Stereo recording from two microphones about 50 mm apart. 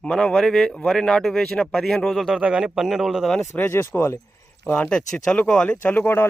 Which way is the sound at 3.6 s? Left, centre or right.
Left.